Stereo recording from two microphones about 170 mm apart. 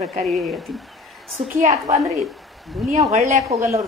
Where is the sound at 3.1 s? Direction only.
40° right (ahead or behind).